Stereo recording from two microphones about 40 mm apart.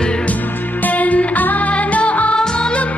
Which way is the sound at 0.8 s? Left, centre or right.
Left.